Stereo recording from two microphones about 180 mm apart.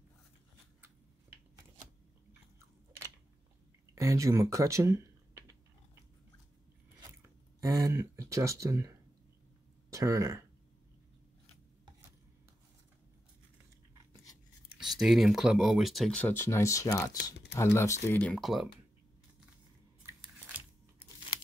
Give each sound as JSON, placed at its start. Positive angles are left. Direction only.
{"t": 3.9, "sound": "speech", "side_deg": -15}
{"t": 7.6, "sound": "speech", "side_deg": -20}
{"t": 14.8, "sound": "speech", "side_deg": 0}
{"t": 20.0, "sound": "a sound", "side_deg": -10}